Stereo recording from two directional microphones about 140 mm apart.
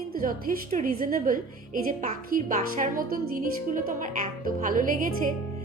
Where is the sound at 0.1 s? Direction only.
90° right; by 5.1 s 70° right (ahead or behind).